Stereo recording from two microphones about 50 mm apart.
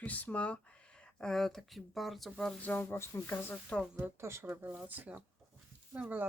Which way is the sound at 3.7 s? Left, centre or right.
Left.